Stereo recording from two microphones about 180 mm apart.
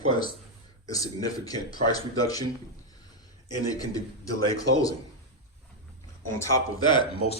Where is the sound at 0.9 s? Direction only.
20° left (ahead or behind).